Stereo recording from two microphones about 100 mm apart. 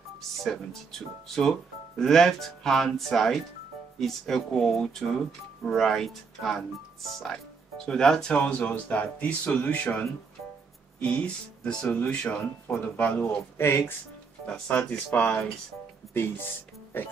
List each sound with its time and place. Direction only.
0.4 s speech: 5° left (ahead or behind); by 13.9 s 25° left (ahead or behind)
14.4 s speech: 10° left (ahead or behind)
16.1 s speech: 25° left (ahead or behind)